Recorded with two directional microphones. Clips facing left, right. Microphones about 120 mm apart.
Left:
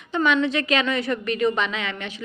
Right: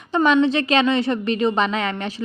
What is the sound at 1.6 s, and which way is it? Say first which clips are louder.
Speech: right 6 dB; 40° right (ahead or behind).